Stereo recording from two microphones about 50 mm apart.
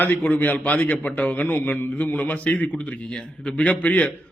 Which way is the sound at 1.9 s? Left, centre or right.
Left.